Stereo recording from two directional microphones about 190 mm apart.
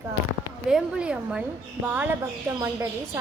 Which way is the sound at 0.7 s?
5° right (ahead or behind).